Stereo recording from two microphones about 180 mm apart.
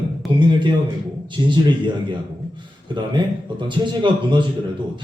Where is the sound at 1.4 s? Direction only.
20° right (ahead or behind).